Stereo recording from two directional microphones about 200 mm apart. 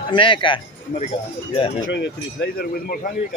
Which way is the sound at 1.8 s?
60° left (ahead or behind).